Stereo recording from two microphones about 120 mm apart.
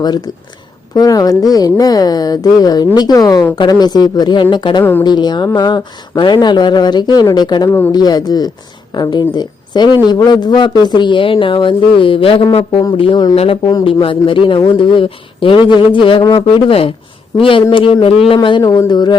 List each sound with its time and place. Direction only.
0.0 s speech: 35° left (ahead or behind)
4.8 s speech: 15° left (ahead or behind)
5.0 s speech: 35° left (ahead or behind)